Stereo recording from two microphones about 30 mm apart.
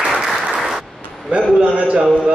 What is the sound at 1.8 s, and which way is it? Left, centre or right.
Speech, right.